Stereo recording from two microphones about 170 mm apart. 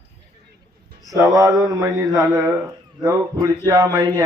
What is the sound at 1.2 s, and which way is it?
A man's voice, 20° right (ahead or behind).